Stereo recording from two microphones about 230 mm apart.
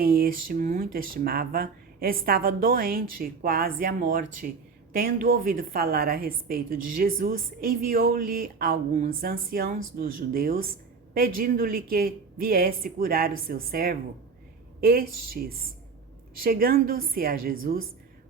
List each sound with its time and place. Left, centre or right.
0.0 s speech: right